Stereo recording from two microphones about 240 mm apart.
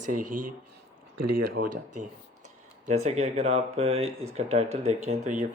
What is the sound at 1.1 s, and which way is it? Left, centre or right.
Speech, right.